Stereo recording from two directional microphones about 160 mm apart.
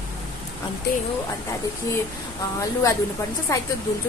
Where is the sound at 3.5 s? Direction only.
20° left (ahead or behind).